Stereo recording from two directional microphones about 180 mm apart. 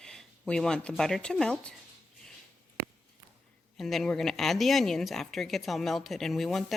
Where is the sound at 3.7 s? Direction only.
Centre (ahead or behind).